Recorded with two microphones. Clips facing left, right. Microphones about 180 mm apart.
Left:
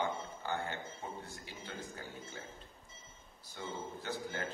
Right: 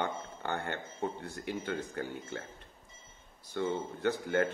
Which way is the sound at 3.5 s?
65° right (ahead or behind).